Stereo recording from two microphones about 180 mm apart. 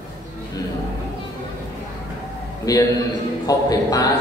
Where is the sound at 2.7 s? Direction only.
20° left (ahead or behind).